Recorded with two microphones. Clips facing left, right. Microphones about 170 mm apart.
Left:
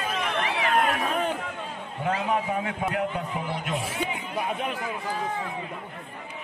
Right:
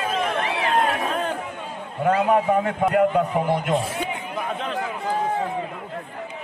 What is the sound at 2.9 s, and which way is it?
Speech, 55° right (ahead or behind).